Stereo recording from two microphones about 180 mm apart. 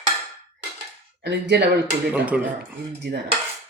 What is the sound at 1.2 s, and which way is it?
Speech, 70° right (ahead or behind).